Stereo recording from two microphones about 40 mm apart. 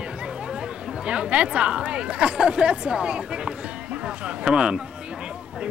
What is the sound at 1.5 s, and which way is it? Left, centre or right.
Speech, right.